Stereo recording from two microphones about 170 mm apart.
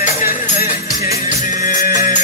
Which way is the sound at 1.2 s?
50° left (ahead or behind).